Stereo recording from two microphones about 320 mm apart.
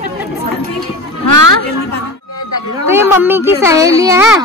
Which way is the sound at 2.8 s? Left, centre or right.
Centre.